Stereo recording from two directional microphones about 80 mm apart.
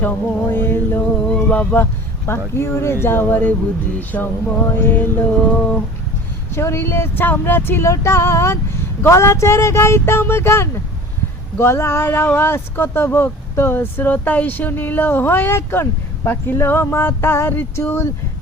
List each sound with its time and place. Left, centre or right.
0.0 s speech: left
1.2 s a sound: centre; by 2.4 s left
2.6 s speech: left
4.7 s music: left
6.5 s speech: left